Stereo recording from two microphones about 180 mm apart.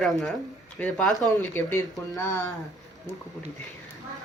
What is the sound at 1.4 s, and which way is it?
Speech, 10° left (ahead or behind).